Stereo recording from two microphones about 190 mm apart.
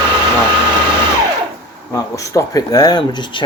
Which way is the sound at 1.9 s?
15° left (ahead or behind).